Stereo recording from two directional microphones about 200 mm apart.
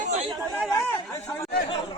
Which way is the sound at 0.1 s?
30° right (ahead or behind).